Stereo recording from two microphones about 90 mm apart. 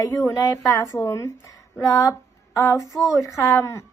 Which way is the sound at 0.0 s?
35° left (ahead or behind).